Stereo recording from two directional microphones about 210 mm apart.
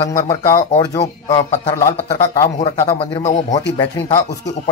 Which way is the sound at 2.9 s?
30° left (ahead or behind).